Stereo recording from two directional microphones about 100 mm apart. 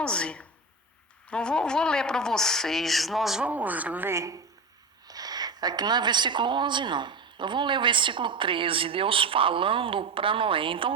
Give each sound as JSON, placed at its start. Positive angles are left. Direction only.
{"t": 0.0, "sound": "a woman's voice", "side_deg": 10}
{"t": 3.5, "sound": "speech", "side_deg": -15}
{"t": 4.1, "sound": "a woman's voice", "side_deg": -30}